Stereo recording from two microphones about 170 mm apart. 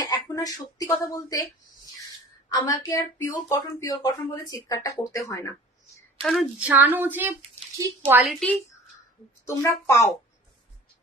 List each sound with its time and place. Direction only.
0.0 s speech: 20° left (ahead or behind)
2.5 s speech: 20° left (ahead or behind)
6.2 s speech: centre (ahead or behind)
6.7 s a woman's voice: 10° right (ahead or behind)
9.5 s speech: 15° left (ahead or behind)